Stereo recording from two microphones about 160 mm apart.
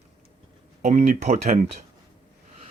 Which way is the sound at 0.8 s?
55° right (ahead or behind).